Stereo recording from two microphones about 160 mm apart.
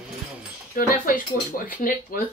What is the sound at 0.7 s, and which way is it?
Speech, 60° left (ahead or behind).